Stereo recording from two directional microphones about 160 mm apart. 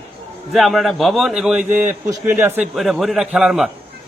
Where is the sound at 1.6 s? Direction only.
15° right (ahead or behind).